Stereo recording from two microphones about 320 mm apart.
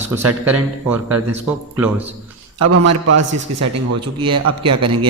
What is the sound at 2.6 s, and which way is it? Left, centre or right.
A man's voice, right.